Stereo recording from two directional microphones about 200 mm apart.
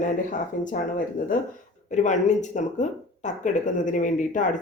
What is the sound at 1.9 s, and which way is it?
Speech, 35° left (ahead or behind).